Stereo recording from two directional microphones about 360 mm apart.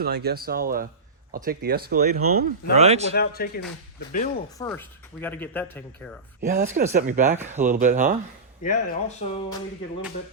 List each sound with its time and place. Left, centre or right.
0.0 s a man's voice: right
3.2 s speech: left
4.5 s speech: centre
6.4 s speech: right
8.6 s speech: centre